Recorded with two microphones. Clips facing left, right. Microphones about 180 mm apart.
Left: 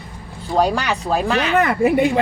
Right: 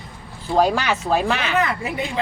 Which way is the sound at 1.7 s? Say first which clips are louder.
Left 10 dB; 60° left (ahead or behind).